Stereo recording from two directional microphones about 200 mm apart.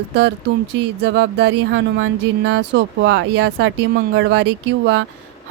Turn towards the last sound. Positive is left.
turn(degrees=-60)  # may be behind; listen again after turning